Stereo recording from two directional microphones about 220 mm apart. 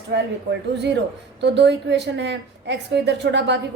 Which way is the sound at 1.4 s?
50° right (ahead or behind).